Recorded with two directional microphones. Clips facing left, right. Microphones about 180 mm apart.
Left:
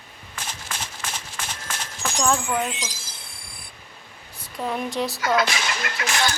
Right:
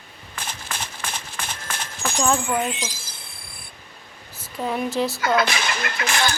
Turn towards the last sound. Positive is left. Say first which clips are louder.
# right 1 dB
turn(degrees=-60)  # may be behind; listen again after turning